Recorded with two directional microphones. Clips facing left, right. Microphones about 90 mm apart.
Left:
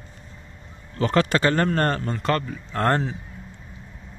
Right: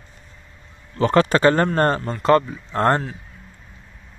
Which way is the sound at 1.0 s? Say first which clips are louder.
Right 4 dB; 35° right (ahead or behind).